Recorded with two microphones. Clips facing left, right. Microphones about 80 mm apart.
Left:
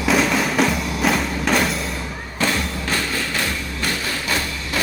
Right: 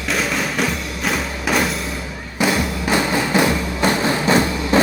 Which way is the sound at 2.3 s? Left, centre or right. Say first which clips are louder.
Right 4 dB; centre.